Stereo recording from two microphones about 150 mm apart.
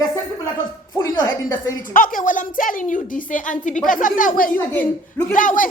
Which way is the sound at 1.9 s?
65° left (ahead or behind).